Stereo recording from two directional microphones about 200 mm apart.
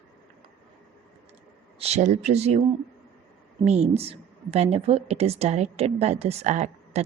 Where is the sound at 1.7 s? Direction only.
30° right (ahead or behind).